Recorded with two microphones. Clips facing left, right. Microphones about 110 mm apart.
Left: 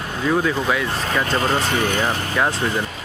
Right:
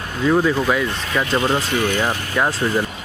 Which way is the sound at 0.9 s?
40° left (ahead or behind).